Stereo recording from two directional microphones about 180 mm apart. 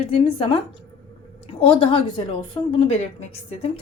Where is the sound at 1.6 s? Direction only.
30° left (ahead or behind).